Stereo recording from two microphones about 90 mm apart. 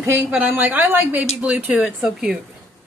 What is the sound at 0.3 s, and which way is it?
A woman's voice, 15° right (ahead or behind).